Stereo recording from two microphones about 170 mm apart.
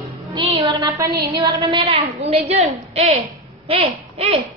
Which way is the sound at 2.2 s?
35° right (ahead or behind).